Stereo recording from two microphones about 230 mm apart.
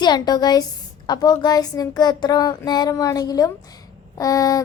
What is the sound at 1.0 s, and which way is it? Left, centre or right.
Speech, centre.